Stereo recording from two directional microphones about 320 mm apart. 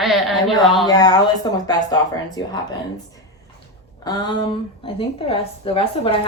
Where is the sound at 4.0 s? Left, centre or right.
Centre.